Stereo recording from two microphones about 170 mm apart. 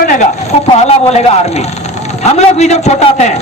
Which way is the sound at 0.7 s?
40° left (ahead or behind).